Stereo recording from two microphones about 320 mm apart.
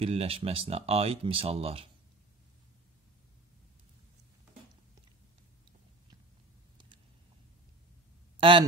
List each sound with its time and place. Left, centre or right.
0.0 s speech: centre
8.4 s speech: centre